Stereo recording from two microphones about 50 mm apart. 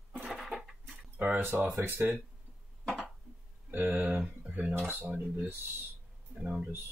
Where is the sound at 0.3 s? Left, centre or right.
Centre.